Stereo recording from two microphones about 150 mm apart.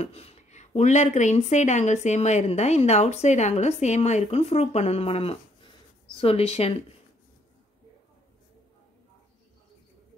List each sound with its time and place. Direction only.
0.0 s speech: 40° left (ahead or behind)